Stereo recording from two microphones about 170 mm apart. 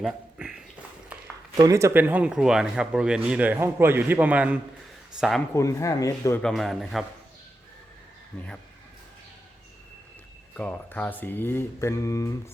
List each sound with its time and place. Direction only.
0.0 s a sound: 5° right (ahead or behind)
1.5 s a man's voice: 20° right (ahead or behind)
5.5 s speech: 20° left (ahead or behind)
6.4 s a man's voice: centre (ahead or behind)
10.5 s speech: 10° left (ahead or behind)